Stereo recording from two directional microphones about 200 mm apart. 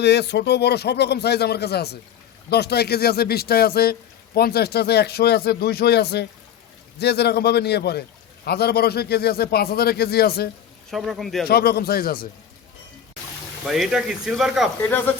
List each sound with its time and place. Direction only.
0.0 s a man's voice: 55° left (ahead or behind)
10.9 s speech: centre (ahead or behind)
11.4 s a man's voice: 50° left (ahead or behind)
13.7 s speech: centre (ahead or behind)
14.8 s speech: 10° left (ahead or behind)